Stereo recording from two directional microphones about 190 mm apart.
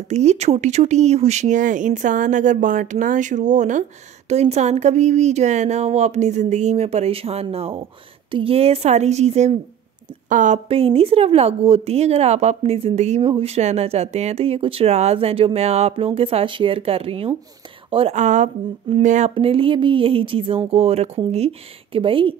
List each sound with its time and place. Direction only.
0.1 s speech: 35° right (ahead or behind)
10.7 s speech: 30° right (ahead or behind)